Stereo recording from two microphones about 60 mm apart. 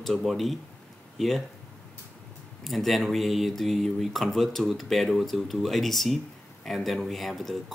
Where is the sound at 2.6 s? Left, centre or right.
Centre.